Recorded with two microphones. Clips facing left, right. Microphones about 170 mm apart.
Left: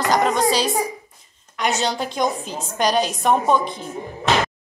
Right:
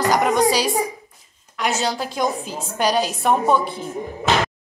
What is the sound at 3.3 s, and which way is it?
Speech, 15° left (ahead or behind).